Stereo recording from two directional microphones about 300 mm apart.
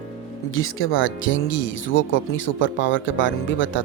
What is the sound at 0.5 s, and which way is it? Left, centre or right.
Speech, left.